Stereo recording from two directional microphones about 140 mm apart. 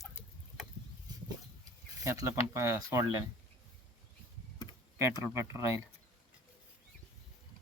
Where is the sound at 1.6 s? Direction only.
25° right (ahead or behind).